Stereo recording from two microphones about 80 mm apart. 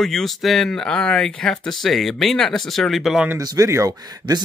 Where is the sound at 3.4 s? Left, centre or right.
Right.